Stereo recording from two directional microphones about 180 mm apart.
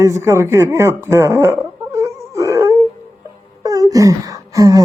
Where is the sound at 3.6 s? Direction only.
20° right (ahead or behind).